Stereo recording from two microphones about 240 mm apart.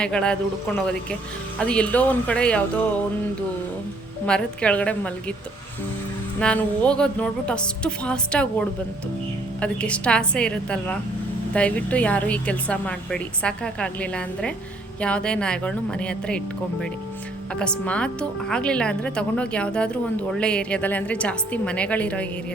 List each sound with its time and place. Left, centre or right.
0.0 s speech: centre
4.3 s speech: centre
6.4 s speech: centre
17.5 s speech: centre